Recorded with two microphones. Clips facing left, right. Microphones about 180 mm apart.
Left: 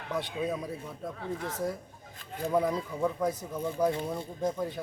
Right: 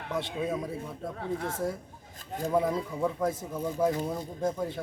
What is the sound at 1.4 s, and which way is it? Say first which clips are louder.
Speech: right 2 dB; 25° right (ahead or behind).